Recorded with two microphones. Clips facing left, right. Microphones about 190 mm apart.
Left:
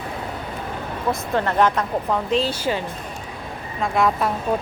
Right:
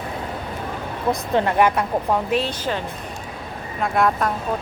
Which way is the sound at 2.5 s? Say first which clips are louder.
Left 2 dB; 10° left (ahead or behind).